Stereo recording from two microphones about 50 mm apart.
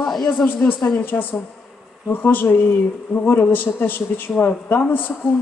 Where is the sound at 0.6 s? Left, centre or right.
Left.